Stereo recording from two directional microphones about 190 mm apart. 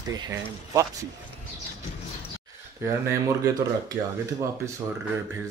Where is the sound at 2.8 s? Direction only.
15° right (ahead or behind).